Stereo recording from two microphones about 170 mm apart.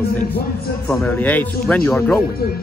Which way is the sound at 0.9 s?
10° left (ahead or behind).